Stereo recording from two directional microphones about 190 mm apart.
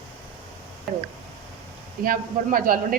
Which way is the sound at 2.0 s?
50° right (ahead or behind).